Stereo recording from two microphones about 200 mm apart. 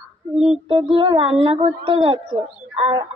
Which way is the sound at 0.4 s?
30° right (ahead or behind).